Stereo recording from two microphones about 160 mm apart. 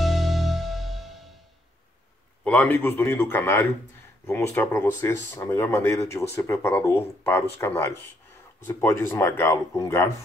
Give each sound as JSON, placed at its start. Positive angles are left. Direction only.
{"t": 0.0, "sound": "music", "side_deg": 0}
{"t": 2.4, "sound": "speech", "side_deg": 10}